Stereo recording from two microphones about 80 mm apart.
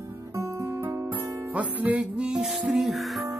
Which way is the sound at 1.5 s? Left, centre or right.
Centre.